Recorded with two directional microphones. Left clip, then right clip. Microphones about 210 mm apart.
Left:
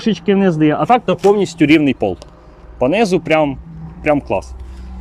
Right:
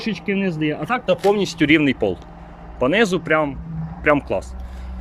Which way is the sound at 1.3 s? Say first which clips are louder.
Left 5 dB; centre (ahead or behind).